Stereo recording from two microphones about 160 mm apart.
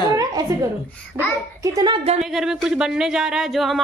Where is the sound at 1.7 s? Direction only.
20° right (ahead or behind).